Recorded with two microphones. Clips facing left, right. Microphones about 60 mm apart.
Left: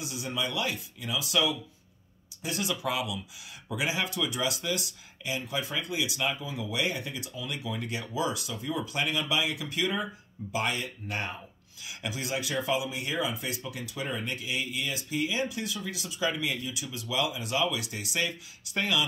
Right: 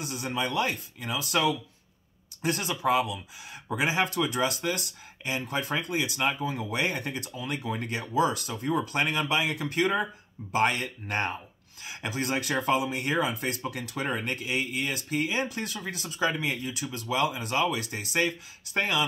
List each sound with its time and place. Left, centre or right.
0.0 s speech: right